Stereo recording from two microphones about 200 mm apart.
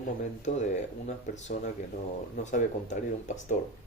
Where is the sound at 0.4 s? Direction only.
35° left (ahead or behind).